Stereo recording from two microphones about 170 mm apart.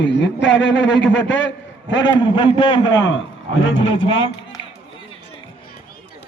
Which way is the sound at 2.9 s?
90° left.